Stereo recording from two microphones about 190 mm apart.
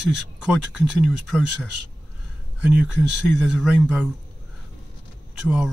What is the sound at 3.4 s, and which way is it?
Speech, centre (ahead or behind).